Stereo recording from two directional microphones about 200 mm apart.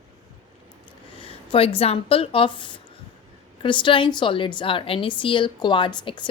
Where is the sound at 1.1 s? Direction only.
25° left (ahead or behind).